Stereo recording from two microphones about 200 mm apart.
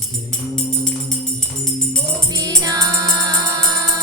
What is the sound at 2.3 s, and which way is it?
Music, 20° right (ahead or behind).